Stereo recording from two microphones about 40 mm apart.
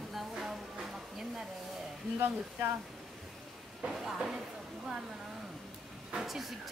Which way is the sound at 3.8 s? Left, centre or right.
Centre.